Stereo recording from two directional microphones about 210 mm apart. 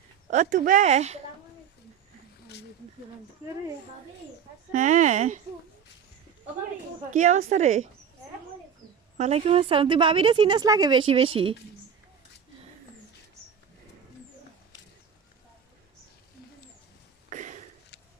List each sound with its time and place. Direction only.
0.3 s speech: 35° right (ahead or behind)
4.7 s speech: 35° right (ahead or behind)
7.1 s speech: 35° right (ahead or behind)
9.1 s a woman's voice: 30° right (ahead or behind)
17.2 s a sound: 35° right (ahead or behind)